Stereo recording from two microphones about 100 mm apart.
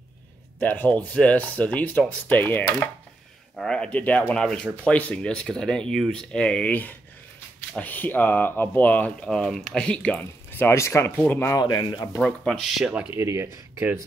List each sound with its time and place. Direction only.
0.6 s speech: 15° left (ahead or behind)
3.5 s speech: 5° left (ahead or behind)
12.2 s speech: 5° left (ahead or behind)
13.1 s speech: 25° right (ahead or behind)